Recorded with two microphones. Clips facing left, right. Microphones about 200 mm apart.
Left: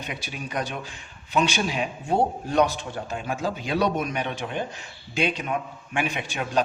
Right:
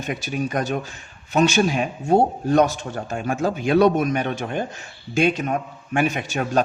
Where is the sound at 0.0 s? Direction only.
45° right (ahead or behind).